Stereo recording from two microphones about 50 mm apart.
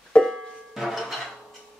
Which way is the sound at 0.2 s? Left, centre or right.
Centre.